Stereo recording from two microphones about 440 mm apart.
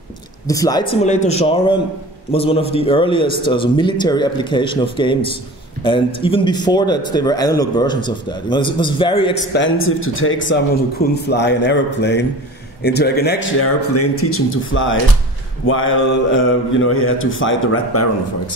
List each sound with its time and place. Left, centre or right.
0.5 s a man's voice: centre; by 18.0 s left